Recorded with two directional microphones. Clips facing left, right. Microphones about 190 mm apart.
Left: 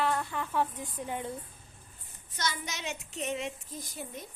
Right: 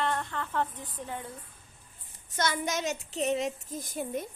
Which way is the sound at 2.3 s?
50° right (ahead or behind).